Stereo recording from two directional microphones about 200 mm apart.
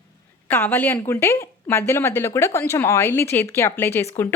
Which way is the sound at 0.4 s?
10° left (ahead or behind).